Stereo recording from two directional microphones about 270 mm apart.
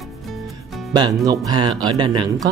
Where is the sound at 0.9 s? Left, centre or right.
Centre.